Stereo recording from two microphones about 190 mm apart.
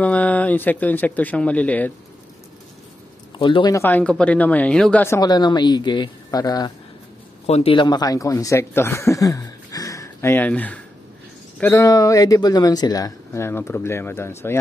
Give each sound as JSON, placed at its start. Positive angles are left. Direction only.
{"t": 0.0, "sound": "speech", "side_deg": 5}
{"t": 3.3, "sound": "speech", "side_deg": 25}
{"t": 7.4, "sound": "speech", "side_deg": 30}